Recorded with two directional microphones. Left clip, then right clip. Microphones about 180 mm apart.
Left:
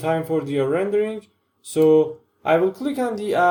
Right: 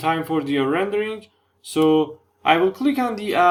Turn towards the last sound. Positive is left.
turn(degrees=-20)  # may be behind; listen again after turning